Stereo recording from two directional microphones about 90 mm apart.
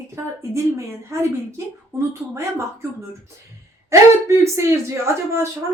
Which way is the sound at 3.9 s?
30° right (ahead or behind).